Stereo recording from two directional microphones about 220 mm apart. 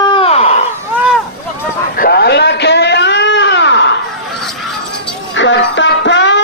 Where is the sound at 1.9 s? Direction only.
45° left (ahead or behind).